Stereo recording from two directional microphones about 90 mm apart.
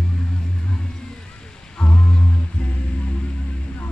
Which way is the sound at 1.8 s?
10° left (ahead or behind).